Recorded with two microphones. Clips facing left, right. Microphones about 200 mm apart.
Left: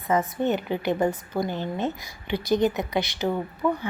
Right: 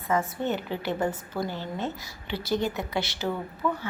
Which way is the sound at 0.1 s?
15° left (ahead or behind).